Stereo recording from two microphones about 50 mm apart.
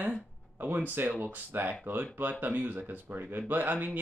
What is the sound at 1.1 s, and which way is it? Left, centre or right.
Speech, right.